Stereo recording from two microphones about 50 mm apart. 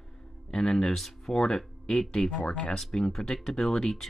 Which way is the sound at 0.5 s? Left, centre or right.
Centre.